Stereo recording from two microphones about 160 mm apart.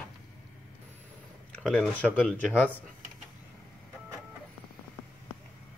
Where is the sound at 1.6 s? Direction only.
5° left (ahead or behind).